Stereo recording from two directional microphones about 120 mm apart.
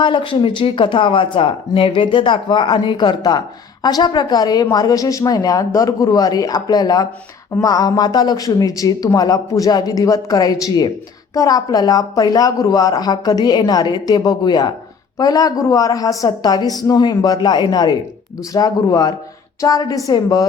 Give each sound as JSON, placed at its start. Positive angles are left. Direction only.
{"t": 0.0, "sound": "speech", "side_deg": 45}